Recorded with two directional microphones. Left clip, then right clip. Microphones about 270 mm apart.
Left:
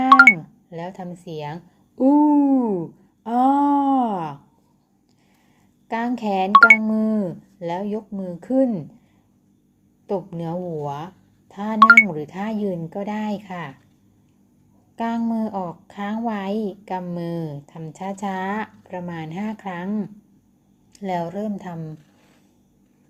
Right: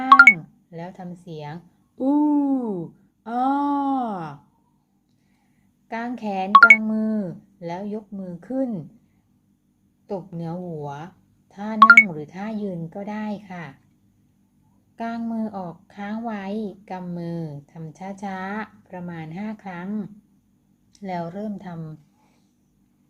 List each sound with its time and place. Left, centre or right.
0.1 s music: centre
0.7 s a woman's voice: centre
3.2 s a sound: centre
5.9 s a woman's voice: centre
6.5 s speech: centre
6.8 s a woman's voice: centre
10.1 s speech: centre
11.8 s speech: centre
12.1 s a woman's voice: centre
14.9 s a woman's voice: centre